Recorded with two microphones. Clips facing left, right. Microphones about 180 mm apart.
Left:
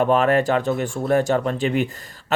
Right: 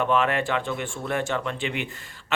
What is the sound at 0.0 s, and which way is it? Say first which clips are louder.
Speech: left 6 dB; 40° left (ahead or behind).